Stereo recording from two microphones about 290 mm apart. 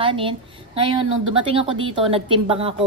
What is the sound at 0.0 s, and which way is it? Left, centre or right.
A woman's voice, centre.